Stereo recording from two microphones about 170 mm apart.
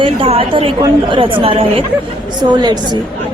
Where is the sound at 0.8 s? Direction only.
30° right (ahead or behind).